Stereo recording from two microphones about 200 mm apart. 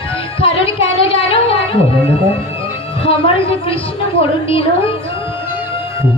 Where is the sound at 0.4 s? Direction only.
30° left (ahead or behind).